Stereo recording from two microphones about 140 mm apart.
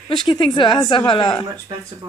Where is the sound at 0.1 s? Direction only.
35° left (ahead or behind).